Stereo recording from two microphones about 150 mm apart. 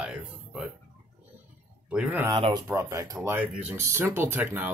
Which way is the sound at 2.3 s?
30° right (ahead or behind).